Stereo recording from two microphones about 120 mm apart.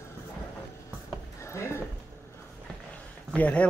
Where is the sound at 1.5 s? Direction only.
25° left (ahead or behind).